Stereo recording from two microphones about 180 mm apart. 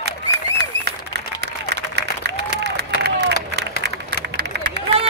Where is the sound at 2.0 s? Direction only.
70° right (ahead or behind).